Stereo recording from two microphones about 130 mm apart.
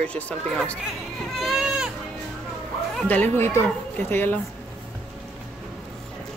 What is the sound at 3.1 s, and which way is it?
Speech, 15° left (ahead or behind).